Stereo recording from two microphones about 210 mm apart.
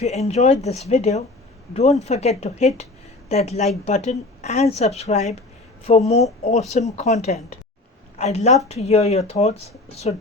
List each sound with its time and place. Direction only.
0.0 s speech: 30° left (ahead or behind)